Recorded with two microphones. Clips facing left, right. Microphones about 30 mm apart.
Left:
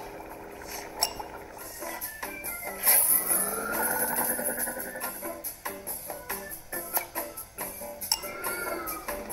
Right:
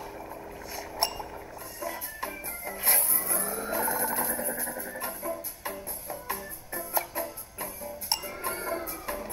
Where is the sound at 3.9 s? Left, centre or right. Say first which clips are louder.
Even; right.